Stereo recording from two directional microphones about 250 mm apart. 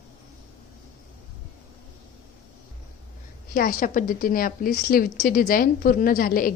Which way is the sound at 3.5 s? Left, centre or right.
Left.